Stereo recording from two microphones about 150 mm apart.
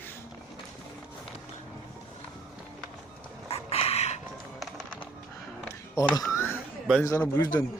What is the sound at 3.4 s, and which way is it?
Chicken, 40° left (ahead or behind).